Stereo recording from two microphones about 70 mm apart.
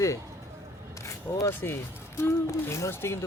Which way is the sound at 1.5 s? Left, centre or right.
Left.